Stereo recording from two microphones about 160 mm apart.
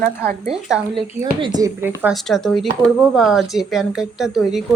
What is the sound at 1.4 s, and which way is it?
Speech, 25° right (ahead or behind).